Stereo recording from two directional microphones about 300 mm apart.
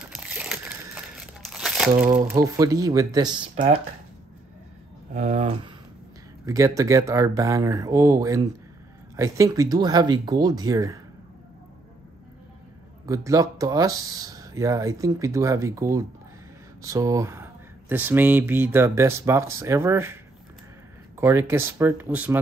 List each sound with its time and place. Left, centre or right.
0.0 s crumpling: centre
2.1 s speech: centre
5.1 s speech: right
6.4 s speech: centre
13.0 s speech: centre
21.2 s speech: centre